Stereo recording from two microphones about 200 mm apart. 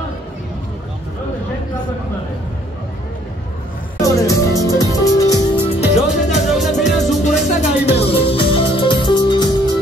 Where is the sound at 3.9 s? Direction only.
15° left (ahead or behind).